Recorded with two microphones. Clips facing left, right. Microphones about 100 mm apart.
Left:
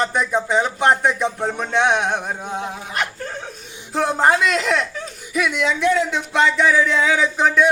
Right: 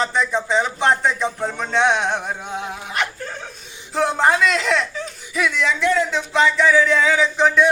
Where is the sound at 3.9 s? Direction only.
5° left (ahead or behind).